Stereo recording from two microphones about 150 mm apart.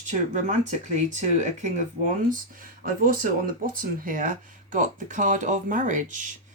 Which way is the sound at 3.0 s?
70° right (ahead or behind).